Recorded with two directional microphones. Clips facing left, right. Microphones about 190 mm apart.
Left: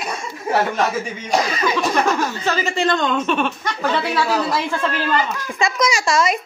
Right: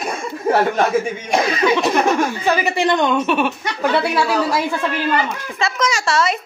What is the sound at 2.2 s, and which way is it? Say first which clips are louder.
Speech: right 3 dB; 15° right (ahead or behind).